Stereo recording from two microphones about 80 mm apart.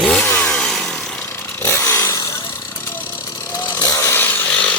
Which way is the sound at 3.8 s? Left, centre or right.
Left.